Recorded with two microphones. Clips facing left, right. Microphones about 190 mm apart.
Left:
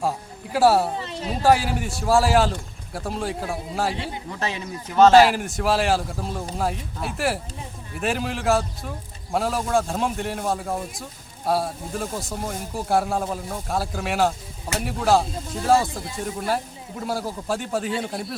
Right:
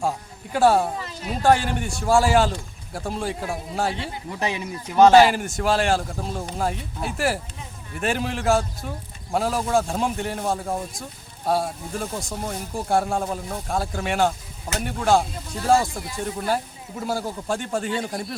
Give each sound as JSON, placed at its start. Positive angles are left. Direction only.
{"t": 0.5, "sound": "speech", "side_deg": 5}
{"t": 0.9, "sound": "a sound", "side_deg": 25}
{"t": 1.4, "sound": "speech", "side_deg": 5}
{"t": 4.3, "sound": "speech", "side_deg": -15}
{"t": 5.1, "sound": "speech", "side_deg": 0}